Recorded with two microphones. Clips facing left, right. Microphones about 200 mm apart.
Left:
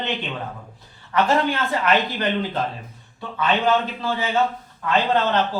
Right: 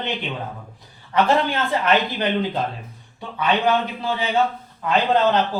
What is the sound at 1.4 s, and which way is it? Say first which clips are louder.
Speech: even; 30° right (ahead or behind).